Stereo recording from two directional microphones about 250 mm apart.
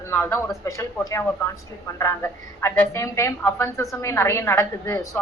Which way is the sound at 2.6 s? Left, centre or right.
Centre.